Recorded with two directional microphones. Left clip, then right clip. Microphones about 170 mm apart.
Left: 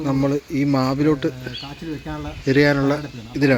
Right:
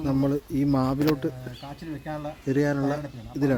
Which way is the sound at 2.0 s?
25° right (ahead or behind).